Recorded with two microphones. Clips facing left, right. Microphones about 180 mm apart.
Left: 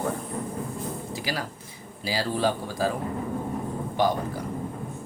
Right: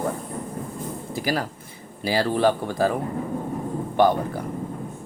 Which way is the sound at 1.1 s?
50° right (ahead or behind).